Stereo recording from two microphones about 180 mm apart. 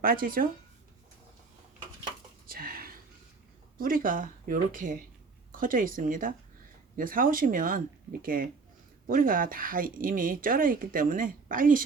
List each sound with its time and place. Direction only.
0.0 s speech: 50° right (ahead or behind)
2.5 s a sound: 55° right (ahead or behind)
3.8 s speech: 50° right (ahead or behind)